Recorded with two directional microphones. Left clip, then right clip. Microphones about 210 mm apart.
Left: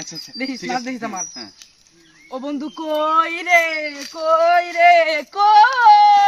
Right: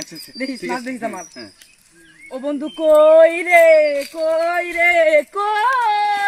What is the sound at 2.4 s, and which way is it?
Speech, 15° left (ahead or behind).